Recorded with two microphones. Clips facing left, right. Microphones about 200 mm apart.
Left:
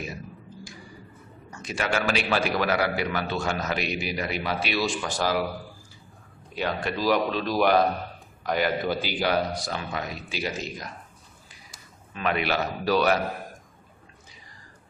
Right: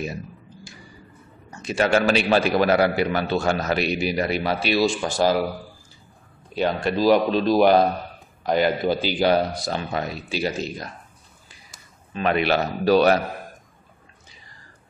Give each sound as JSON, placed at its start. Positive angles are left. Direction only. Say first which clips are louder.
{"t": 1.6, "sound": "a man's voice", "louder": "right 7 dB", "side_deg": -25}
{"t": 6.5, "sound": "a man's voice", "louder": "right 6 dB", "side_deg": -30}
{"t": 12.1, "sound": "a man's voice", "louder": "right 5 dB", "side_deg": -30}